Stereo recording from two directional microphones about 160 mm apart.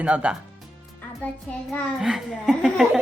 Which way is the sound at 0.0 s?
10° right (ahead or behind).